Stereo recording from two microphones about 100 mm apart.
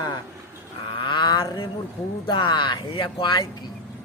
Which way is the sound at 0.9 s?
55° left (ahead or behind).